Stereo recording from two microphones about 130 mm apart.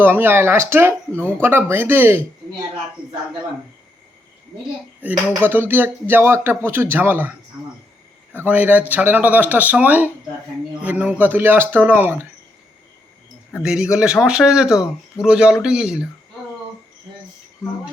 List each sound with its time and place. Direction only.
0.0 s speech: 15° right (ahead or behind)
5.0 s speech: 15° right (ahead or behind)
13.6 s speech: 5° right (ahead or behind)